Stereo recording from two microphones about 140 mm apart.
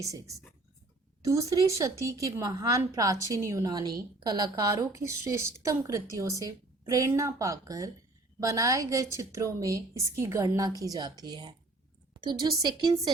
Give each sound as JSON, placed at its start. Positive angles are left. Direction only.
{"t": 0.0, "sound": "a woman's voice", "side_deg": -25}